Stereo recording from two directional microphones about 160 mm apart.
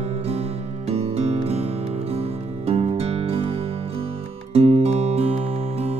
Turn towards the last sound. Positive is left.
turn(degrees=-40)  # may be behind; listen again after turning